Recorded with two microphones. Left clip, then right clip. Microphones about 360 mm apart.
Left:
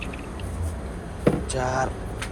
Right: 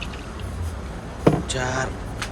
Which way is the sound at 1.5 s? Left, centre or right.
Centre.